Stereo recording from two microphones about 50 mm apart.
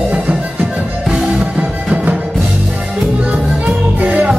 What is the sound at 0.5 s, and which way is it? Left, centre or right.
Music, centre.